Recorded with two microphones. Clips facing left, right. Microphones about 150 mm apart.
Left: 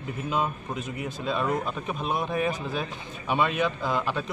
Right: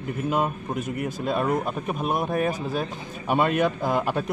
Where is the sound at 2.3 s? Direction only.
40° right (ahead or behind).